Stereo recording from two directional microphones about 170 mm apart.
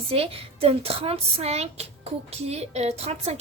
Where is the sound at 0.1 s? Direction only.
35° right (ahead or behind).